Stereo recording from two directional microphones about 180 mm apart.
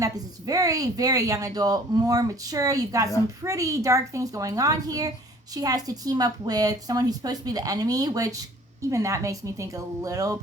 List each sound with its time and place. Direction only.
0.0 s speech: 20° right (ahead or behind)